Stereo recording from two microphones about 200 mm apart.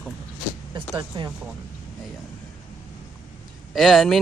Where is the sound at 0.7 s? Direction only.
20° right (ahead or behind).